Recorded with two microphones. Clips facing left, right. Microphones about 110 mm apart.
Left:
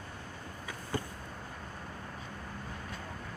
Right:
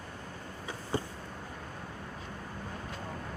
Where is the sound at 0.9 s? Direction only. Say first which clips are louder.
Right 3 dB; 25° right (ahead or behind).